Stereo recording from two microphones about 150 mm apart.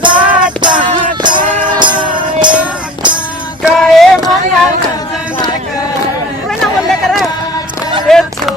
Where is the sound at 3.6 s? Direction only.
Centre (ahead or behind).